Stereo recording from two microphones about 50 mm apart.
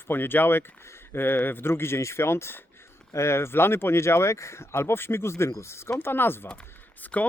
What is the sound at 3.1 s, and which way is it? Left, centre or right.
Speech, left.